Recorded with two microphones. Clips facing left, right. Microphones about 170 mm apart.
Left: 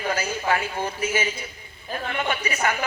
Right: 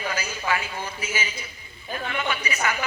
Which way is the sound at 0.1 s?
50° left (ahead or behind).